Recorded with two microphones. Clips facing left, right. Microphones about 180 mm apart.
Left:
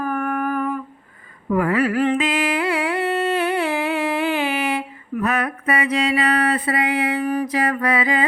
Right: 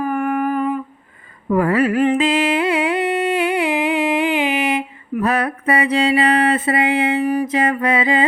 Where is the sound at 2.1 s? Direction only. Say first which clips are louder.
Right 4 dB; 30° right (ahead or behind).